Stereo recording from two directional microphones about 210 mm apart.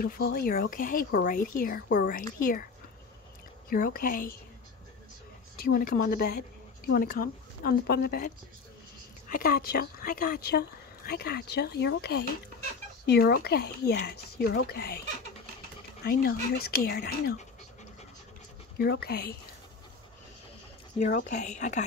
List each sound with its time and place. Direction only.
0.0 s speech: 45° left (ahead or behind)
3.7 s speech: 40° left (ahead or behind)
5.6 s speech: 45° left (ahead or behind)
9.3 s speech: 45° left (ahead or behind)
16.0 s speech: 45° left (ahead or behind)
18.8 s speech: 50° left (ahead or behind)
21.1 s speech: 35° left (ahead or behind)